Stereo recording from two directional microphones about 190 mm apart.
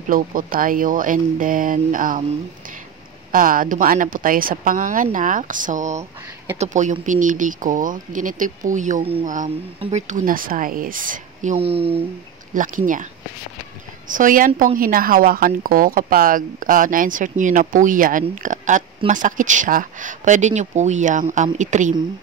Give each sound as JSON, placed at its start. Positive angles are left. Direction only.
{"t": 0.1, "sound": "speech", "side_deg": -45}
{"t": 3.3, "sound": "speech", "side_deg": -45}
{"t": 11.5, "sound": "speech", "side_deg": -30}
{"t": 12.5, "sound": "speech", "side_deg": -45}
{"t": 14.1, "sound": "speech", "side_deg": -45}